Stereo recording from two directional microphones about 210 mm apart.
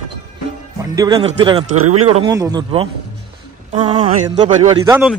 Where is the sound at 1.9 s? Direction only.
30° right (ahead or behind).